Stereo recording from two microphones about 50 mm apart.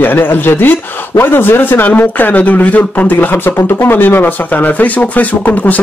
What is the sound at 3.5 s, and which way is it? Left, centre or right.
Speech, left.